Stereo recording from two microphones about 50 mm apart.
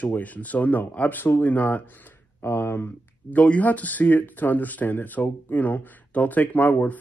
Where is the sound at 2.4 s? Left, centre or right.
Left.